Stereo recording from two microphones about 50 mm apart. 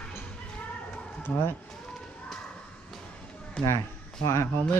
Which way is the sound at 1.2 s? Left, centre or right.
Left.